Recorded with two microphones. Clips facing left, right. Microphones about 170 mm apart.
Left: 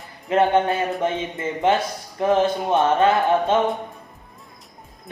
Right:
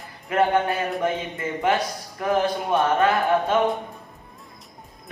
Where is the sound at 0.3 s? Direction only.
25° left (ahead or behind).